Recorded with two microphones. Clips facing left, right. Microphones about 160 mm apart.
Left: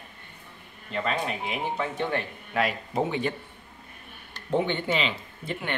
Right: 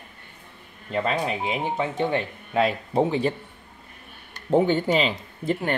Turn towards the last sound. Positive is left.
turn(degrees=-40)  # may be behind; listen again after turning